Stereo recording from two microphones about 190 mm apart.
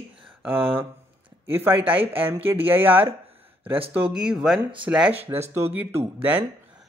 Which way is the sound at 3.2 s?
30° right (ahead or behind).